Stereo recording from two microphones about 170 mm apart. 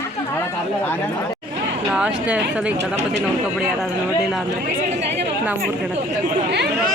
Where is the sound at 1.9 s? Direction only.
5° right (ahead or behind).